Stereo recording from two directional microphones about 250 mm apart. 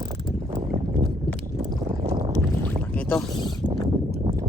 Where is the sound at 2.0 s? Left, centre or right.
Right.